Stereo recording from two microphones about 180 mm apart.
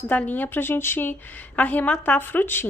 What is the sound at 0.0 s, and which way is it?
A woman's voice, 10° left (ahead or behind).